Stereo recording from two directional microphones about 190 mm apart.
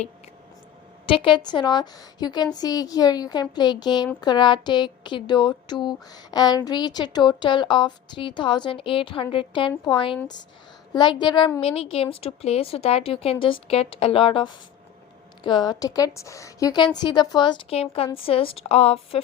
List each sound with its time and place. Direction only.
1.0 s a woman's voice: 25° left (ahead or behind)